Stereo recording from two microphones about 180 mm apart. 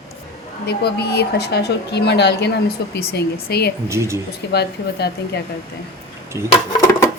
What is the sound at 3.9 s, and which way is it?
Speech, 15° right (ahead or behind).